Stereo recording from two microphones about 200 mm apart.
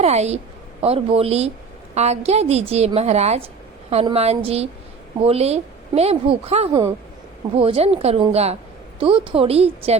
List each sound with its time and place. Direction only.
0.0 s a woman's voice: 35° right (ahead or behind)